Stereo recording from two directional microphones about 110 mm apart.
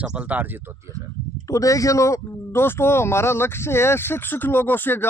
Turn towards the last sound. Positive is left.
turn(degrees=20)  # may be behind; listen again after turning